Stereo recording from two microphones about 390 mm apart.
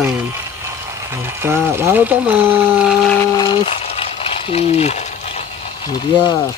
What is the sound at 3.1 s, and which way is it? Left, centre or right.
Speech, centre.